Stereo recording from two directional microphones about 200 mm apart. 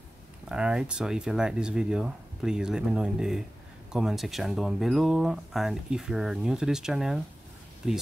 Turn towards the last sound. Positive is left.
turn(degrees=-5)  # may be behind; listen again after turning